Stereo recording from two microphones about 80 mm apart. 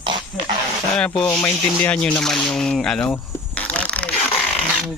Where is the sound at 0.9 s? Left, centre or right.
Centre.